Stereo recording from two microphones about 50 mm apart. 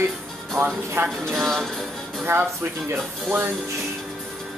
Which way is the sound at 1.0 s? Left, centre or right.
Right.